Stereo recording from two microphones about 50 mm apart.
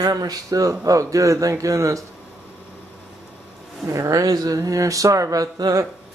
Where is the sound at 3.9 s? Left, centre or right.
Right.